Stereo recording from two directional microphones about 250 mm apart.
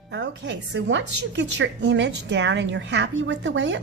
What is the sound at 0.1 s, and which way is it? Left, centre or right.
A woman's voice, right.